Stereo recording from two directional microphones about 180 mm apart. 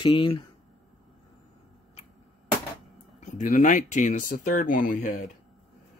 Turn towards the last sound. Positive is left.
turn(degrees=45)  # may be behind; listen again after turning